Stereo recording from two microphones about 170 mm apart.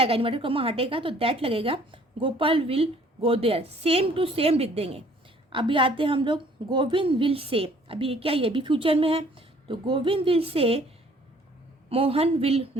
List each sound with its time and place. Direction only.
0.0 s a woman's voice: 35° right (ahead or behind)
11.9 s a woman's voice: 35° right (ahead or behind)